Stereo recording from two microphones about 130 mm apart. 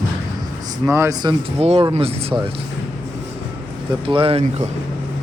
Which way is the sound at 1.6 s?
50° right (ahead or behind).